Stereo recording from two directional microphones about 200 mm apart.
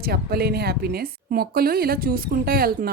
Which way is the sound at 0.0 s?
50° right (ahead or behind).